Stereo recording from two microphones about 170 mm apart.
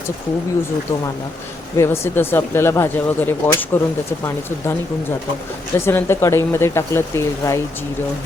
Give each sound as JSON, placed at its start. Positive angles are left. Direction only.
{"t": 1.7, "sound": "speech", "side_deg": 15}
{"t": 5.8, "sound": "speech", "side_deg": 15}